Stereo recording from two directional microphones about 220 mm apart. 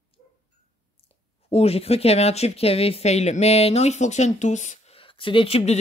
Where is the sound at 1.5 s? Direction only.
25° left (ahead or behind).